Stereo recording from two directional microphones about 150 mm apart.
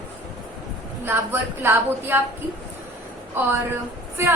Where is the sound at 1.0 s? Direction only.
15° right (ahead or behind).